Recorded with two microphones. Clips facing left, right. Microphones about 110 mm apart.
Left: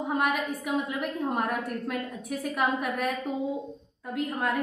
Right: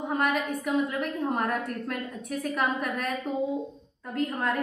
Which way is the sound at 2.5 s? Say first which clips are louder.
Left 1 dB; 10° left (ahead or behind).